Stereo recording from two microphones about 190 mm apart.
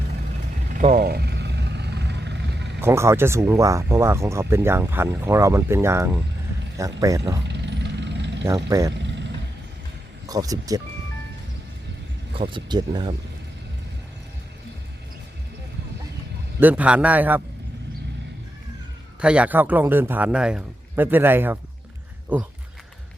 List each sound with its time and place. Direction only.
0.8 s vehicle: 45° right (ahead or behind); by 2.7 s 65° right (ahead or behind)
2.8 s speech: 15° right (ahead or behind)
7.4 s vehicle: 65° right (ahead or behind)
8.4 s speech: 15° right (ahead or behind)
10.2 s speech: 20° right (ahead or behind)
12.4 s speech: 25° right (ahead or behind)
16.6 s speech: 10° right (ahead or behind)
19.2 s speech: 5° right (ahead or behind)